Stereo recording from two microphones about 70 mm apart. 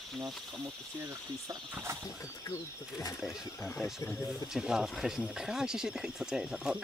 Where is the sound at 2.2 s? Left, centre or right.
Left.